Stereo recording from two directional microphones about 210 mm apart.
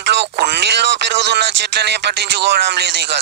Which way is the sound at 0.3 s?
55° right (ahead or behind).